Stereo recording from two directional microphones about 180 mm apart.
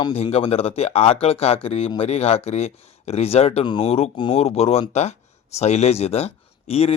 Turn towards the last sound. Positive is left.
turn(degrees=35)  # may be behind; listen again after turning